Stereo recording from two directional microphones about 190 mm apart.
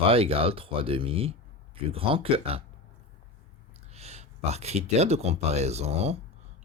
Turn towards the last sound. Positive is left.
turn(degrees=-35)  # may be behind; listen again after turning